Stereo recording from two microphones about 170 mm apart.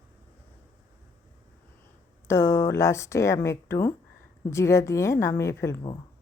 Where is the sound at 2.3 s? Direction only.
15° left (ahead or behind).